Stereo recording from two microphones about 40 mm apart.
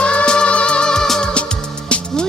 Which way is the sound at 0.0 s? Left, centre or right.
Left.